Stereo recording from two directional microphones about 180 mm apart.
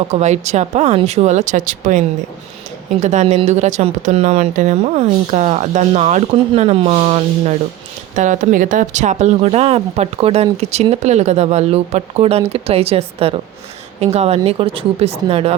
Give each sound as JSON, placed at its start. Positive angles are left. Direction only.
{"t": 0.1, "sound": "speech", "side_deg": -40}